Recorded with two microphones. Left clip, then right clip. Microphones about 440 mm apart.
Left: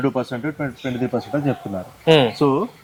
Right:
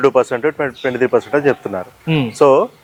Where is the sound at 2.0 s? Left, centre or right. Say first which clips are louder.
Left 7 dB; left.